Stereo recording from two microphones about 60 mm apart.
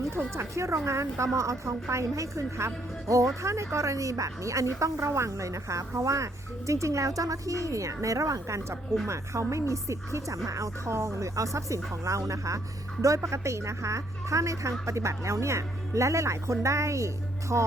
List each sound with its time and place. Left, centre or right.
0.3 s a woman's voice: right
17.5 s music: right